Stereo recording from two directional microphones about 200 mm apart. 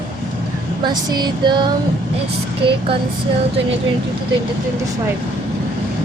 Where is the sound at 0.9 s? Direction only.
20° right (ahead or behind).